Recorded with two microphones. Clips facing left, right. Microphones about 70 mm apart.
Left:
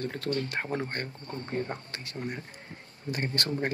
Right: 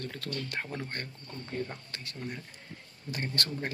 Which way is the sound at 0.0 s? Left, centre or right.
Left.